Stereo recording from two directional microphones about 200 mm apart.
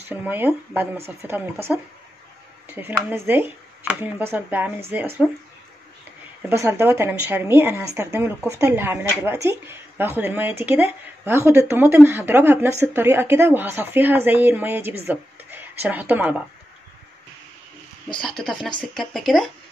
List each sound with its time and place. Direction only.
0.1 s a woman's voice: 10° right (ahead or behind)
6.5 s a woman's voice: 15° right (ahead or behind)
18.1 s speech: 5° left (ahead or behind)